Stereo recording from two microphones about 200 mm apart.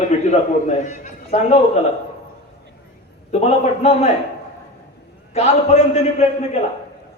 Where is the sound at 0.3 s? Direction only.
35° left (ahead or behind).